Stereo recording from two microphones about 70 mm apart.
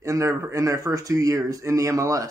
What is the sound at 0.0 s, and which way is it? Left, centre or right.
Speech, right.